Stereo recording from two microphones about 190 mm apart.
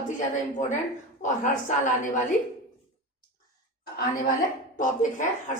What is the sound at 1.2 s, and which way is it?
Speech, 40° left (ahead or behind).